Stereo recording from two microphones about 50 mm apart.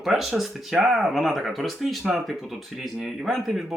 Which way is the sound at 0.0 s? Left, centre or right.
Centre.